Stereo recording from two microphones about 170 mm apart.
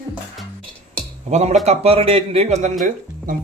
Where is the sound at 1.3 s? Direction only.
40° right (ahead or behind).